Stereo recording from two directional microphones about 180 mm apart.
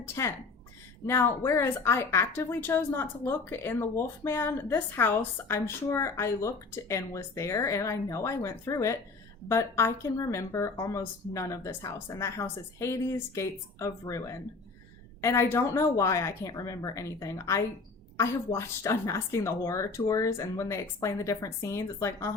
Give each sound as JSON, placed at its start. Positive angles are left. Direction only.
{"t": 0.0, "sound": "a woman's voice", "side_deg": 15}